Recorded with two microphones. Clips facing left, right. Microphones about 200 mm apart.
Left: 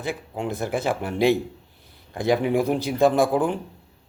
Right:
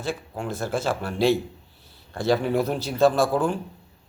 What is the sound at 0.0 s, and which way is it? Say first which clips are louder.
A man's voice: left 1 dB; 20° left (ahead or behind).